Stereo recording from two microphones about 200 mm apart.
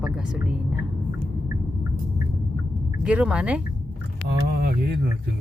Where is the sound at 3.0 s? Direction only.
5° right (ahead or behind).